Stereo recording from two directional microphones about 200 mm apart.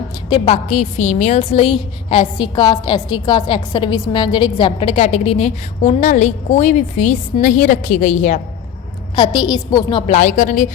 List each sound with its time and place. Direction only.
0.3 s a woman's voice: 30° left (ahead or behind)
9.1 s a woman's voice: 25° left (ahead or behind)
10.2 s a woman's voice: 40° left (ahead or behind)